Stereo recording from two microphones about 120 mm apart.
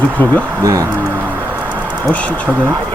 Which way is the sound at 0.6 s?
30° right (ahead or behind).